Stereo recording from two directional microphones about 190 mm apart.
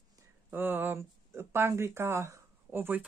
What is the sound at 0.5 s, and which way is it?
Speech, 10° right (ahead or behind).